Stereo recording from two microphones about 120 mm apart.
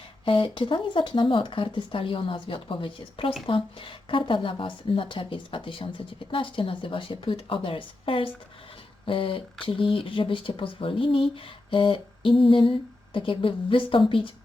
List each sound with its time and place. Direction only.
0.3 s speech: 45° left (ahead or behind)